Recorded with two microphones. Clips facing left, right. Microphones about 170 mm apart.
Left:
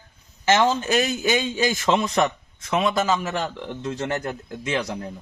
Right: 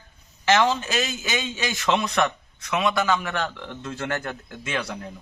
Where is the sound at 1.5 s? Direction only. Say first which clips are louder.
Left 7 dB; 45° left (ahead or behind).